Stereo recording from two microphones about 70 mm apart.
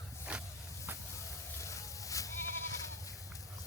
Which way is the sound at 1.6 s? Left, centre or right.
Left.